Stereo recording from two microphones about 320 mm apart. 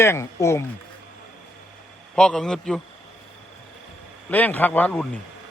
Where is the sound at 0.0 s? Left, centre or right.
Centre.